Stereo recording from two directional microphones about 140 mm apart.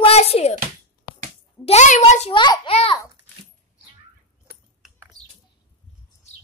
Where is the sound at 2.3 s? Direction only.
35° left (ahead or behind).